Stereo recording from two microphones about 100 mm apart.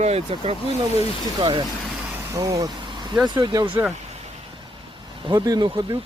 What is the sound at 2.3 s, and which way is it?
Speech, 35° right (ahead or behind).